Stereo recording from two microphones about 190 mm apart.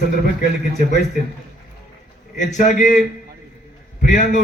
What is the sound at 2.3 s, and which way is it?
Speech, 40° left (ahead or behind).